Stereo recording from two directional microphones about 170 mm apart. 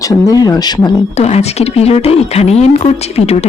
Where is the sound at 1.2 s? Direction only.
40° left (ahead or behind).